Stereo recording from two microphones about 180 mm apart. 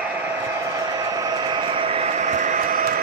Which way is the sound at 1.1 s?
20° right (ahead or behind).